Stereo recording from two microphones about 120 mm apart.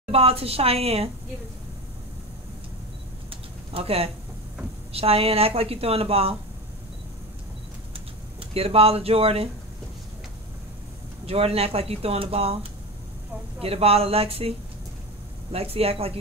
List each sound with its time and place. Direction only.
0.1 s speech: 55° right (ahead or behind)
3.3 s a sound: 55° right (ahead or behind)
4.9 s speech: 55° right (ahead or behind)
8.5 s speech: 55° right (ahead or behind)
11.2 s speech: 55° right (ahead or behind)
13.6 s speech: 55° right (ahead or behind)
15.5 s speech: 55° right (ahead or behind)